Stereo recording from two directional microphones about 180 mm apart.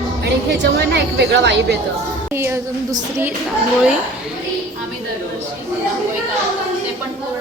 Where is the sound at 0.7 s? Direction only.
70° right (ahead or behind).